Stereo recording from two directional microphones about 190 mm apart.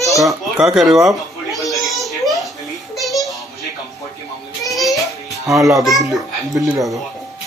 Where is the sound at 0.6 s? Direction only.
Centre (ahead or behind).